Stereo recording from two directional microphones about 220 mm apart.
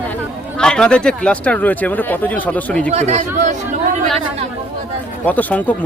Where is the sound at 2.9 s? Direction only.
30° right (ahead or behind).